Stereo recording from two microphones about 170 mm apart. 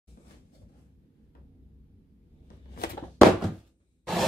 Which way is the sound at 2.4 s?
60° left (ahead or behind).